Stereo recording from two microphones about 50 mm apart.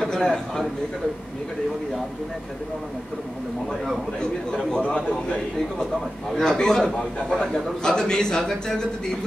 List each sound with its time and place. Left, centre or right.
0.2 s a man's voice: centre
4.2 s a man's voice: centre
4.8 s a man's voice: left
6.4 s a man's voice: centre